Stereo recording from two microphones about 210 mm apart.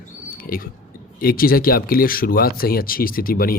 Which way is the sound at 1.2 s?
45° left (ahead or behind).